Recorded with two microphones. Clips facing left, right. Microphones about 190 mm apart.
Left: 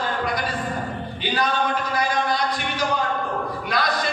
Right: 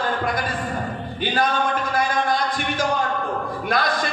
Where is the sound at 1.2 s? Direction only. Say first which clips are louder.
Right 2 dB; 50° right (ahead or behind).